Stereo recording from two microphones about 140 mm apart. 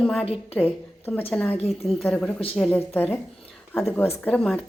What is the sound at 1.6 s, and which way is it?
Speech, 50° left (ahead or behind).